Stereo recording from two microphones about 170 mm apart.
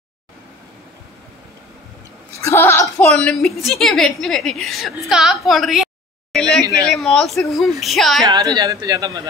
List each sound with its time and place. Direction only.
2.4 s a woman's voice: 15° left (ahead or behind); by 5.9 s centre (ahead or behind)
6.3 s a sound: 5° left (ahead or behind)
6.9 s a woman's voice: centre (ahead or behind)
8.3 s speech: 20° right (ahead or behind)